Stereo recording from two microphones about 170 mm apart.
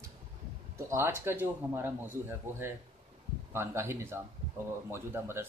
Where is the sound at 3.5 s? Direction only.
15° right (ahead or behind).